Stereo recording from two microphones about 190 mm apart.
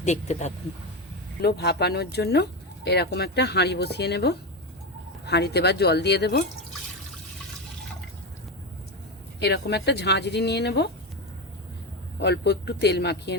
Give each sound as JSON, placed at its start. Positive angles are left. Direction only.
{"t": 0.0, "sound": "speech", "side_deg": 35}
{"t": 1.4, "sound": "speech", "side_deg": 60}
{"t": 9.4, "sound": "speech", "side_deg": 60}
{"t": 12.2, "sound": "speech", "side_deg": 60}